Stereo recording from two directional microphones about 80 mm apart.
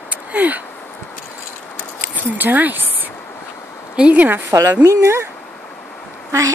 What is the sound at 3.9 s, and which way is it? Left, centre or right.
Speech, centre.